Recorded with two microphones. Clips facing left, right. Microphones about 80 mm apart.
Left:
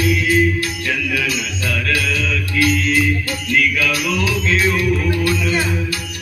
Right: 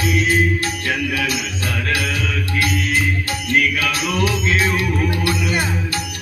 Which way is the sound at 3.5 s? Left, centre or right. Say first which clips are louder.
Left 1 dB; right.